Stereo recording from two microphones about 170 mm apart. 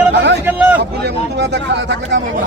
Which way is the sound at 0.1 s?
90° right.